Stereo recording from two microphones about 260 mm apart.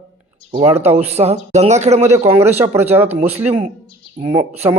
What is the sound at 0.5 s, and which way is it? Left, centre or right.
Speech, centre.